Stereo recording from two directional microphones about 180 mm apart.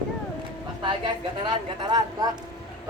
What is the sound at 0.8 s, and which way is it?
A woman's voice, 25° right (ahead or behind).